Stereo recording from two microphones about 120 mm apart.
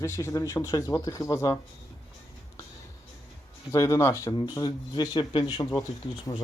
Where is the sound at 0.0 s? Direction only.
25° left (ahead or behind).